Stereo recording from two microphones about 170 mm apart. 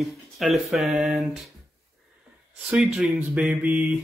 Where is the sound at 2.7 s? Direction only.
5° right (ahead or behind).